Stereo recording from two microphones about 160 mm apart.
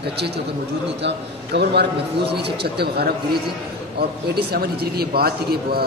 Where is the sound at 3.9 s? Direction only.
75° right (ahead or behind).